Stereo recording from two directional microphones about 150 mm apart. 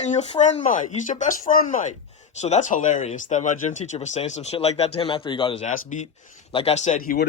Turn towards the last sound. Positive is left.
turn(degrees=50)  # may be behind; listen again after turning